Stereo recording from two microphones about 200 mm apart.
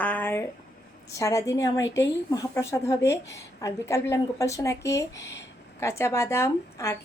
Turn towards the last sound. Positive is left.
turn(degrees=15)  # may be behind; listen again after turning